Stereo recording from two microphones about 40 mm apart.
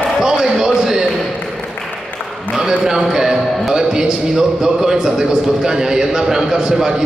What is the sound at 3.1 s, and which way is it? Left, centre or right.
Speech, centre.